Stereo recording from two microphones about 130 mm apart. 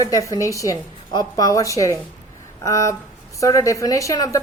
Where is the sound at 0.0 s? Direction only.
25° left (ahead or behind).